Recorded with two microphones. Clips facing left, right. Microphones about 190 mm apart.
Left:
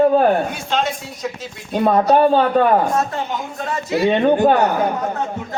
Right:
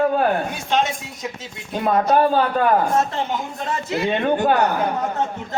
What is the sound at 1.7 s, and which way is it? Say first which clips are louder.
Speech: left 3 dB; 30° left (ahead or behind).